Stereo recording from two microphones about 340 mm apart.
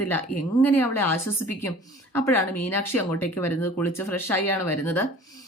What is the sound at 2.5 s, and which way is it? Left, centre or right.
Speech, left.